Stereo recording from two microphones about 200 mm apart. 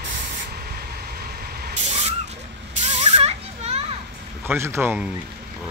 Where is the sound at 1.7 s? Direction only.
30° right (ahead or behind).